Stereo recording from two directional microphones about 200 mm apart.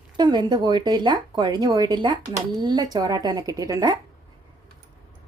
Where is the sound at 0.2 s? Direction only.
20° right (ahead or behind).